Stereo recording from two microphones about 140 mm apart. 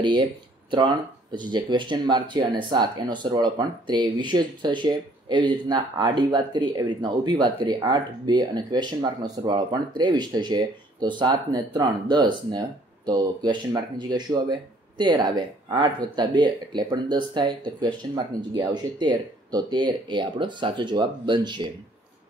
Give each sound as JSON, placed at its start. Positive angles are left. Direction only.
{"t": 0.0, "sound": "speech", "side_deg": -35}